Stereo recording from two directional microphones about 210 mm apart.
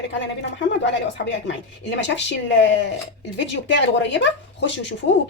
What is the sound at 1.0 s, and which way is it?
Speech, 55° left (ahead or behind).